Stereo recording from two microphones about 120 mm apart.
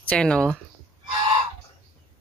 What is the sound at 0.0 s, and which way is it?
Speech, 10° left (ahead or behind).